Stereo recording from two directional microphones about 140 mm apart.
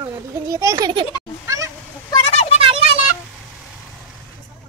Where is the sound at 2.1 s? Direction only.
45° left (ahead or behind).